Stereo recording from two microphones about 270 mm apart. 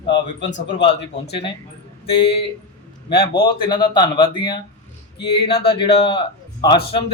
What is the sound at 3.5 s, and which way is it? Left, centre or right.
A man's voice, centre.